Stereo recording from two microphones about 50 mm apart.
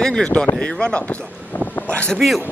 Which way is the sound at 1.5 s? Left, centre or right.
Left.